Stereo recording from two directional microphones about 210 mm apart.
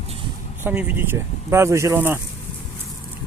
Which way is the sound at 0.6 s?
5° right (ahead or behind).